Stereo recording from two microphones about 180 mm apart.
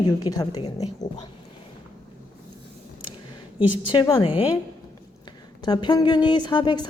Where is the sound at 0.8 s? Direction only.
40° left (ahead or behind).